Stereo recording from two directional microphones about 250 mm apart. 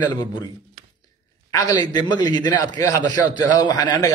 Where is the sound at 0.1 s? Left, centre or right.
Centre.